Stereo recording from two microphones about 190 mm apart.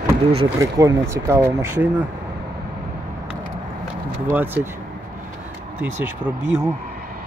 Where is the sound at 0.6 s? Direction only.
15° right (ahead or behind).